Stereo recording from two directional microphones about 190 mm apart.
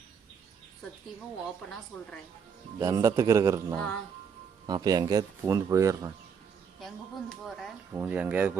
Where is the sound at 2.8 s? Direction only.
15° right (ahead or behind).